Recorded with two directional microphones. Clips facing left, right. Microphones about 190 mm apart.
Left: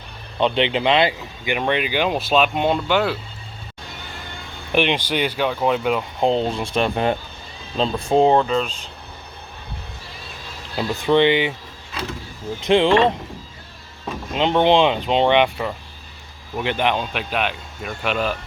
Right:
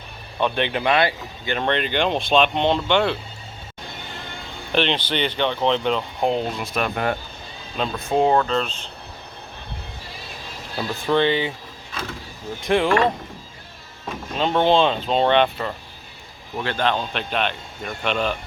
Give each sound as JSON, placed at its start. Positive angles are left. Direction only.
{"t": 0.3, "sound": "speech", "side_deg": 20}
{"t": 4.7, "sound": "speech", "side_deg": 10}
{"t": 6.1, "sound": "speech", "side_deg": 25}
{"t": 8.4, "sound": "speech", "side_deg": 10}
{"t": 10.8, "sound": "speech", "side_deg": 20}
{"t": 12.5, "sound": "speech", "side_deg": 20}
{"t": 14.3, "sound": "speech", "side_deg": 15}